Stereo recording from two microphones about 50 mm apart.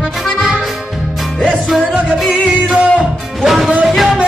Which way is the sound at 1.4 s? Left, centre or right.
Centre.